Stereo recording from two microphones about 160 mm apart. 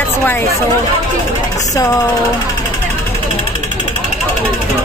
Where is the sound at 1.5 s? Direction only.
20° left (ahead or behind).